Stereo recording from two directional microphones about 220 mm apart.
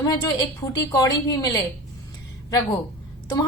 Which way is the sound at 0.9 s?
15° left (ahead or behind).